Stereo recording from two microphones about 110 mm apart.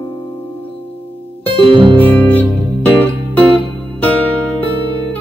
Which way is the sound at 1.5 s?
45° right (ahead or behind).